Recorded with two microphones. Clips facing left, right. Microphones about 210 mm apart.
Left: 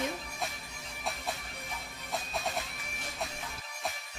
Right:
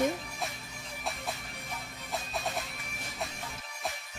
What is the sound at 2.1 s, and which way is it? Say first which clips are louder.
Music: even; centre (ahead or behind).